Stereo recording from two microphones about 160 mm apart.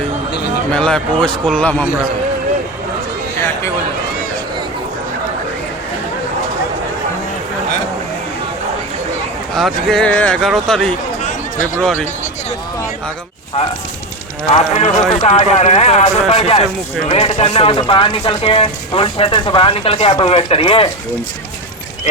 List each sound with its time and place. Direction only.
0.7 s speech: 5° left (ahead or behind)
9.6 s speech: centre (ahead or behind)
11.2 s a sound: 50° left (ahead or behind)
14.5 s speech: 40° left (ahead or behind)